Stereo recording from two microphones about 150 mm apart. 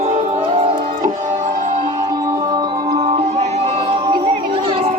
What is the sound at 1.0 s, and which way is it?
Music, 55° right (ahead or behind).